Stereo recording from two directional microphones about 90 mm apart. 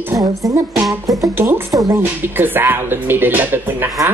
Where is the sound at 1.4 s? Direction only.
25° right (ahead or behind).